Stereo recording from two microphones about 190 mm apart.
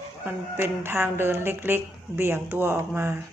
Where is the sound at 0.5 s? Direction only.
10° right (ahead or behind).